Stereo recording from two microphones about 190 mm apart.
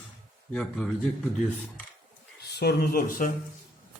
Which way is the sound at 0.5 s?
5° left (ahead or behind).